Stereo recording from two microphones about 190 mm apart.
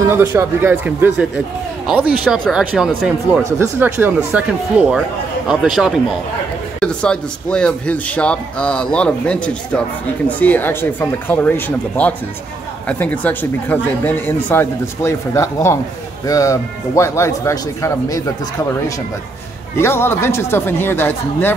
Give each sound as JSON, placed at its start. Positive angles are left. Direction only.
{"t": 0.0, "sound": "speech", "side_deg": -15}
{"t": 19.8, "sound": "speech", "side_deg": 10}